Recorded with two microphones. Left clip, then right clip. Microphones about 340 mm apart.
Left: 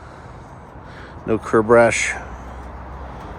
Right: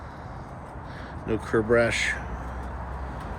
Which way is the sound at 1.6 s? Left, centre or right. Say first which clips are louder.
Left 8 dB; left.